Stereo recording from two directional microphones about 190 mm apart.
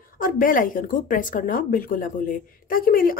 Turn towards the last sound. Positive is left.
turn(degrees=50)  # may be behind; listen again after turning